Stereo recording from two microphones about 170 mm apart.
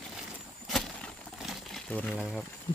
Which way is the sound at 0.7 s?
Centre (ahead or behind).